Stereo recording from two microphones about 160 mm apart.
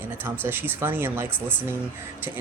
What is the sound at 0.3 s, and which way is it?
Speech, 15° right (ahead or behind).